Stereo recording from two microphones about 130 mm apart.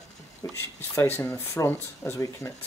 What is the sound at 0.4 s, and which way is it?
Speech, 25° left (ahead or behind).